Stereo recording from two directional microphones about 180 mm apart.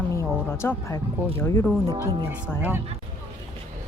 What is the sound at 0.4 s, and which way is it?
Speech, 15° left (ahead or behind).